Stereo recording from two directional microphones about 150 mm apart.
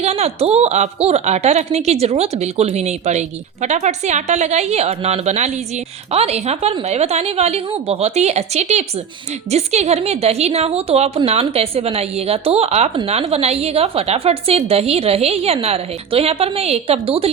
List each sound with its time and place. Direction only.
0.0 s a woman's voice: 45° right (ahead or behind)